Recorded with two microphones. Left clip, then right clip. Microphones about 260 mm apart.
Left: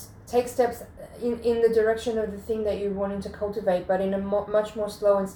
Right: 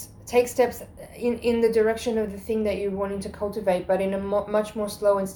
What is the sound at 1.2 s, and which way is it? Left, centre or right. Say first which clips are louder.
A woman's voice: even; right.